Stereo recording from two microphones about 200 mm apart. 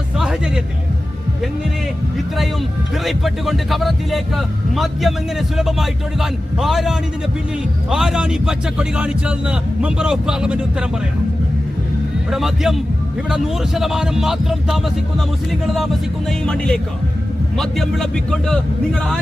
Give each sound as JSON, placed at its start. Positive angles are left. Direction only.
{"t": 0.2, "sound": "music", "side_deg": -5}
{"t": 3.0, "sound": "a man's voice", "side_deg": 0}
{"t": 12.3, "sound": "a man's voice", "side_deg": 0}